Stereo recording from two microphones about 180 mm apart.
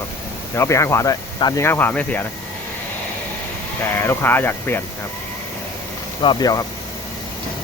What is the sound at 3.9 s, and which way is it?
Speech, 10° left (ahead or behind).